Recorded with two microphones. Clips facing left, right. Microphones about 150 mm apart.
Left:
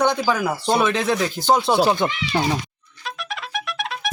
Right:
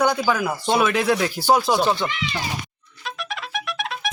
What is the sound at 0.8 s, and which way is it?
Speech, 5° right (ahead or behind).